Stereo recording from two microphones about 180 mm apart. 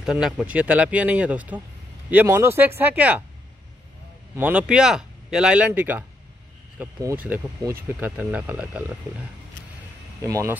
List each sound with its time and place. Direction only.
0.0 s speech: 5° right (ahead or behind)
4.4 s speech: 10° right (ahead or behind)
10.2 s speech: 20° right (ahead or behind)